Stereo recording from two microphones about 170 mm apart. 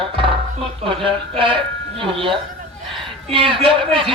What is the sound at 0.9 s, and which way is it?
Speech, 30° right (ahead or behind).